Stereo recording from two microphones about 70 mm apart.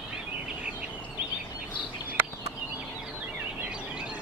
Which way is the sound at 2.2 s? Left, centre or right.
Right.